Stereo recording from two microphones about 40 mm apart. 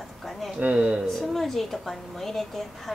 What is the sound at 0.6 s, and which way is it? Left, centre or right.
Speech, right.